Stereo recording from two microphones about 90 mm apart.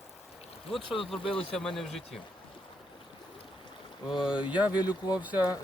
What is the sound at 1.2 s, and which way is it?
Speech, 90° left.